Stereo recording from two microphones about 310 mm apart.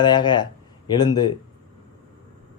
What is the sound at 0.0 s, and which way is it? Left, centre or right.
Speech, centre.